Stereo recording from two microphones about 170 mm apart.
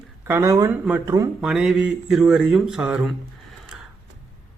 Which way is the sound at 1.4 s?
5° right (ahead or behind).